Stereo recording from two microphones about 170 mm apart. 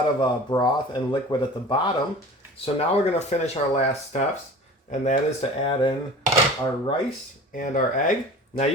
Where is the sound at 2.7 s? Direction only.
40° left (ahead or behind).